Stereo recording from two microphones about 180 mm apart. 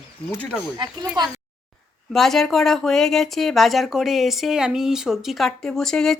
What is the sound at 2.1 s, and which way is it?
Speech, centre (ahead or behind).